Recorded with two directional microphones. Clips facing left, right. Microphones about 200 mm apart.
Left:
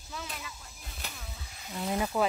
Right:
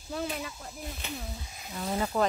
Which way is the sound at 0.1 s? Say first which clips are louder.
Right 8 dB; 40° right (ahead or behind).